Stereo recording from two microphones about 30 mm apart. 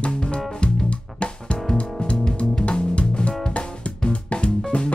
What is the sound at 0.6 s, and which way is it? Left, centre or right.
Music, left.